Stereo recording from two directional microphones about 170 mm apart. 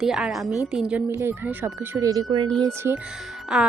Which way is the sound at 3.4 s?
5° right (ahead or behind).